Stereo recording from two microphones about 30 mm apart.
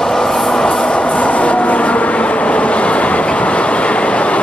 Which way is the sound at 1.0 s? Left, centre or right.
Left.